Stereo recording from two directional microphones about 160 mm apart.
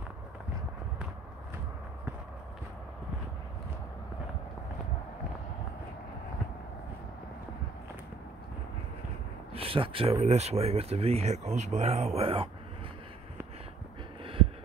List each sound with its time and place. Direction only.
9.5 s speech: 35° right (ahead or behind)
14.2 s heart sounds: 35° right (ahead or behind)